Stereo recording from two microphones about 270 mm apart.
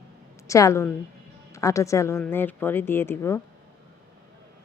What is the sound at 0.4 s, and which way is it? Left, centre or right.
A woman's voice, centre.